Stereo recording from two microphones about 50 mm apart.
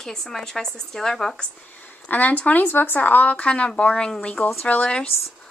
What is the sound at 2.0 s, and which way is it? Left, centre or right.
A woman's voice, left.